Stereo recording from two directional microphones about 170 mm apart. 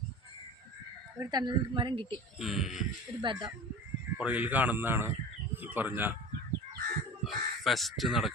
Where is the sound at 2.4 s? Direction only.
Centre (ahead or behind).